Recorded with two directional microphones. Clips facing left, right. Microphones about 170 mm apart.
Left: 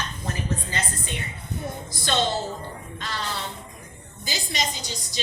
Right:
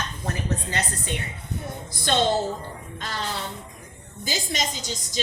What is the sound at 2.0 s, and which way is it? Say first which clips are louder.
Speech: right 2 dB; 55° right (ahead or behind).